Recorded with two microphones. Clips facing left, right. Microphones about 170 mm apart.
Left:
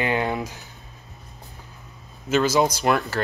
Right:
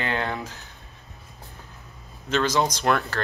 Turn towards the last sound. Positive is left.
turn(degrees=5)  # may be behind; listen again after turning